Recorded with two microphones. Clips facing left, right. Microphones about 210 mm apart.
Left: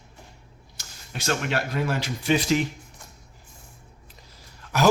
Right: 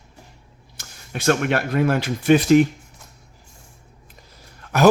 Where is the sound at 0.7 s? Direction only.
55° right (ahead or behind).